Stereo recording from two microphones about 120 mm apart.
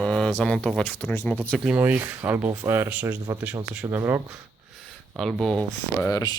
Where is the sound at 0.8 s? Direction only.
15° left (ahead or behind).